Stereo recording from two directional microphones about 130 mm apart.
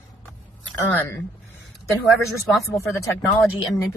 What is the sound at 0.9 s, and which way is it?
Speech, 15° left (ahead or behind).